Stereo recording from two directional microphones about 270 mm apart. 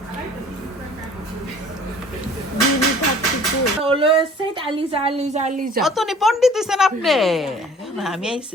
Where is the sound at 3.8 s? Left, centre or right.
Centre.